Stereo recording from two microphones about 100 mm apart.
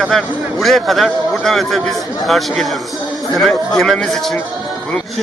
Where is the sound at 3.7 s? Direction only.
5° left (ahead or behind).